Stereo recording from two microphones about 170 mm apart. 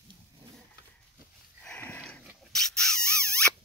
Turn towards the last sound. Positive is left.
turn(degrees=5)  # may be behind; listen again after turning